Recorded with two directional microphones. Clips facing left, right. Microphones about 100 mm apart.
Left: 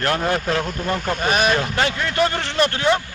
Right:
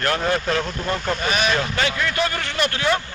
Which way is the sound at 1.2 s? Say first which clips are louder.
Left 5 dB; 40° left (ahead or behind).